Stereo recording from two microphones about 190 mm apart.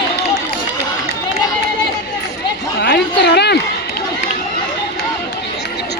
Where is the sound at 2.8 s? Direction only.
60° left (ahead or behind).